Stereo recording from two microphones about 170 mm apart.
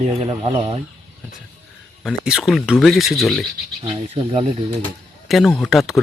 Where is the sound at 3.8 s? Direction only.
35° right (ahead or behind).